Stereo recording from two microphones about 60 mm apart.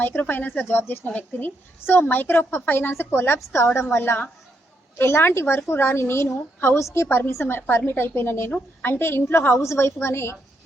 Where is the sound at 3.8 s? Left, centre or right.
Left.